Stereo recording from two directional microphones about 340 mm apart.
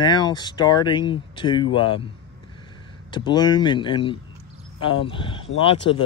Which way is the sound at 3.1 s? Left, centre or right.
Centre.